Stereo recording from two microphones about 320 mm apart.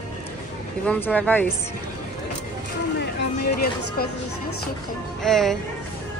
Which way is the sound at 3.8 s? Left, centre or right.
Left.